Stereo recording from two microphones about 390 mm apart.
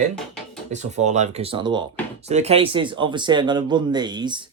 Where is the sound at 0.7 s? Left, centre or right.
Centre.